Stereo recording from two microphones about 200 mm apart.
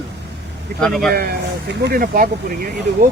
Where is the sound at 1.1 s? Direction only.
50° right (ahead or behind).